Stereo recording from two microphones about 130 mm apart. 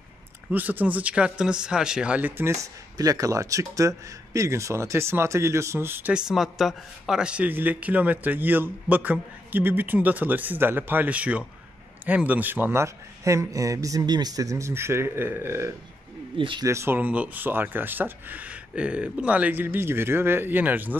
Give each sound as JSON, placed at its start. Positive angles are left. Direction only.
{"t": 0.5, "sound": "a man's voice", "side_deg": -15}
{"t": 2.6, "sound": "a man's voice", "side_deg": -25}
{"t": 6.1, "sound": "a man's voice", "side_deg": -5}
{"t": 16.3, "sound": "speech", "side_deg": -40}
{"t": 16.6, "sound": "a man's voice", "side_deg": -20}